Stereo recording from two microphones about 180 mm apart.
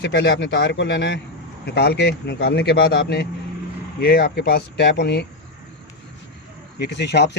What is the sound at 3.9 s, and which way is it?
Speech, 60° left (ahead or behind).